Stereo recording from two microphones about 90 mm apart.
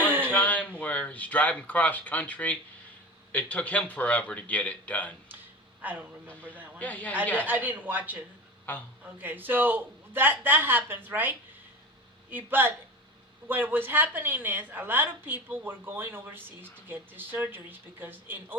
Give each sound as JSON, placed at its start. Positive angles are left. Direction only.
{"t": 0.1, "sound": "a sound", "side_deg": -20}
{"t": 0.3, "sound": "a man's voice", "side_deg": 15}
{"t": 5.8, "sound": "speech", "side_deg": -15}
{"t": 6.2, "sound": "a man's voice", "side_deg": 15}
{"t": 7.4, "sound": "speech", "side_deg": -15}
{"t": 8.7, "sound": "a man's voice", "side_deg": 20}
{"t": 9.2, "sound": "a woman's voice", "side_deg": -20}